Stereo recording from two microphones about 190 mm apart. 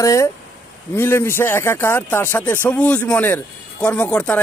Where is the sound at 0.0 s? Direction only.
15° left (ahead or behind).